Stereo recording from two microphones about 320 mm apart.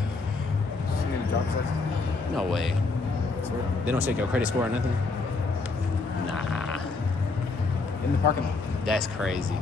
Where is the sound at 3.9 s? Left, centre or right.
Centre.